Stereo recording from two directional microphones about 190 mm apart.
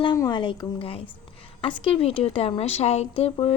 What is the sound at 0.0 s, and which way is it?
Speech, 25° left (ahead or behind).